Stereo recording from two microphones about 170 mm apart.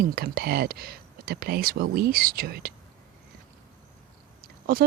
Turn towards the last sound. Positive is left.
turn(degrees=-60)  # may be behind; listen again after turning